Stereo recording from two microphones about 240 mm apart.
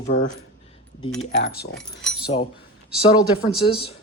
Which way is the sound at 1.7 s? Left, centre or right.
Centre.